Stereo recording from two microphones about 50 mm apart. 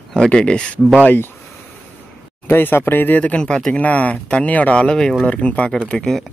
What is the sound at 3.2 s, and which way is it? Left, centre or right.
Speech, left.